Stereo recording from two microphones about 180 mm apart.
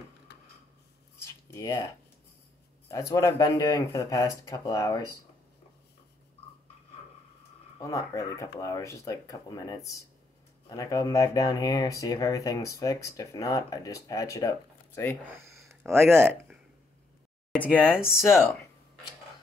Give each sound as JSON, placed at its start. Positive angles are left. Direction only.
{"t": 1.2, "sound": "a sound", "side_deg": 15}
{"t": 2.9, "sound": "speech", "side_deg": 20}
{"t": 7.8, "sound": "speech", "side_deg": 20}
{"t": 15.9, "sound": "speech", "side_deg": -15}
{"t": 17.5, "sound": "speech", "side_deg": -5}